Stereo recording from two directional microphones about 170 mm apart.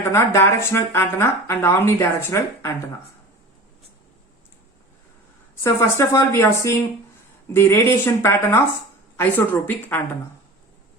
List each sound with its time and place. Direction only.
0.3 s speech: 15° left (ahead or behind)
5.6 s speech: 15° left (ahead or behind)